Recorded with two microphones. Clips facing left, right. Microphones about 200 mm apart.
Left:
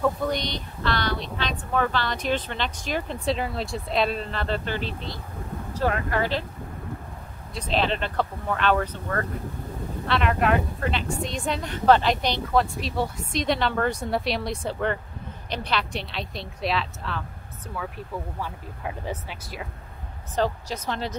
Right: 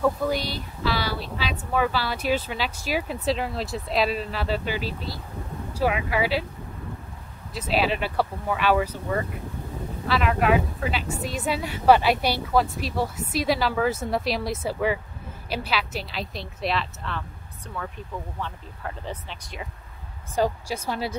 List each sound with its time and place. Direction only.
0.0 s speech: 5° right (ahead or behind)
7.5 s speech: 5° right (ahead or behind)
19.0 s speech: 5° left (ahead or behind)
20.3 s speech: 10° right (ahead or behind)